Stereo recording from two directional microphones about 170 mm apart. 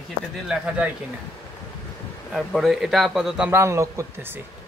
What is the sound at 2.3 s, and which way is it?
A man's voice, centre (ahead or behind).